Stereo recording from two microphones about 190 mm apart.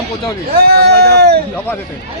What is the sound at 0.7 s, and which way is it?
Speech, 55° right (ahead or behind).